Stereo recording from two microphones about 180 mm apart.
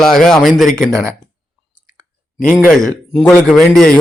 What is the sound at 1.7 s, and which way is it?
Chewing, 20° right (ahead or behind).